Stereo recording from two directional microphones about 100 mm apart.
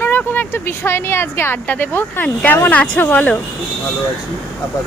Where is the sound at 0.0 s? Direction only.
20° left (ahead or behind).